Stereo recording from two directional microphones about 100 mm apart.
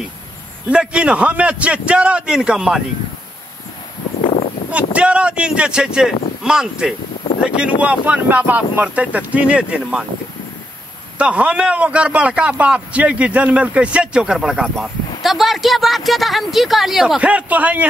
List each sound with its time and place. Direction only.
0.7 s a man's voice: 10° right (ahead or behind)
4.2 s a sound: 70° left (ahead or behind)
4.9 s a man's voice: 10° right (ahead or behind)
11.1 s a man's voice: 10° right (ahead or behind)